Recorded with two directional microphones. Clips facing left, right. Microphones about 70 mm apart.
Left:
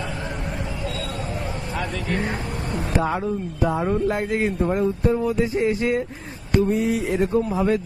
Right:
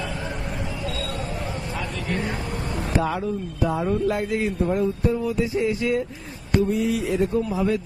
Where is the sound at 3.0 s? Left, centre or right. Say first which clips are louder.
Left 1 dB; left.